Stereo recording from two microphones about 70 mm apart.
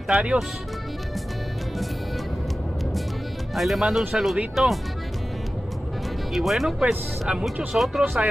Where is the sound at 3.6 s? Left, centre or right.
Centre.